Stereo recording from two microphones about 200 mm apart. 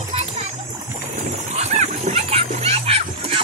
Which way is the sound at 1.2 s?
35° right (ahead or behind).